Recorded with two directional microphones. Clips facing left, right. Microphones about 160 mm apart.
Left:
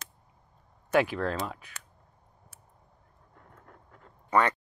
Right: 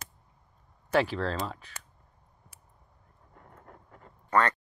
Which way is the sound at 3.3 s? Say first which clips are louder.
Right 2 dB; 5° right (ahead or behind).